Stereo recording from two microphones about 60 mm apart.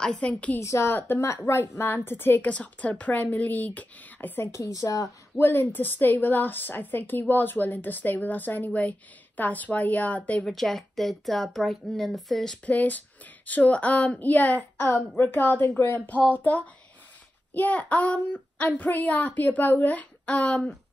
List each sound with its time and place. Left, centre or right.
0.0 s a woman's voice: centre
0.6 s a woman's voice: left
2.5 s a child's voice: left
4.7 s speech: left
5.4 s a woman's voice: left
10.4 s speech: centre
12.6 s a child's voice: left